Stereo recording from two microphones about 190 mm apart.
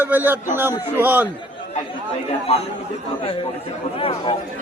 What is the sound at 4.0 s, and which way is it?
Speech, 30° left (ahead or behind).